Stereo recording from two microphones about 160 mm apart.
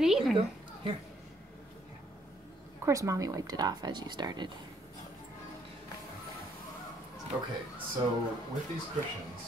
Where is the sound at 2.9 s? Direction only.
20° right (ahead or behind).